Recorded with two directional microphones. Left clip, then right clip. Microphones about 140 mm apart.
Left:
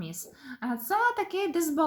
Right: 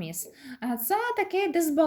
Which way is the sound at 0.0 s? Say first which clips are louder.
Right 3 dB; 15° right (ahead or behind).